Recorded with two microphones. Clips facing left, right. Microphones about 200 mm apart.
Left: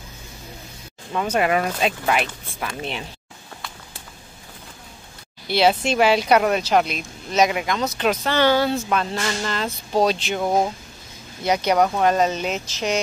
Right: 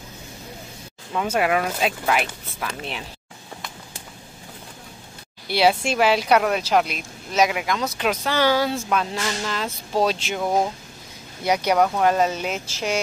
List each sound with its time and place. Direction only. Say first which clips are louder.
1.1 s speech: left 1 dB; 5° right (ahead or behind)
5.5 s speech: left 1 dB; 5° right (ahead or behind)
10.4 s speech: left 1 dB; 10° left (ahead or behind)
11.4 s speech: left 1 dB; 10° right (ahead or behind)